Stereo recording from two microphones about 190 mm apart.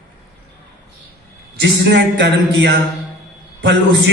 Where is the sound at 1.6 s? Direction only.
65° right (ahead or behind).